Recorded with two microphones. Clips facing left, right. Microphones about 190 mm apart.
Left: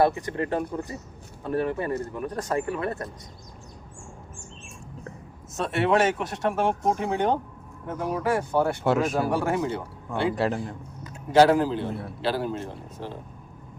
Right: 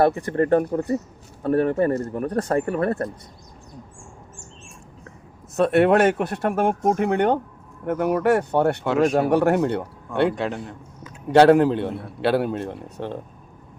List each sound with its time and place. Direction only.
0.0 s speech: 50° right (ahead or behind)
5.5 s speech: 55° right (ahead or behind)
10.3 s a man's voice: 5° left (ahead or behind)
11.3 s speech: 65° right (ahead or behind)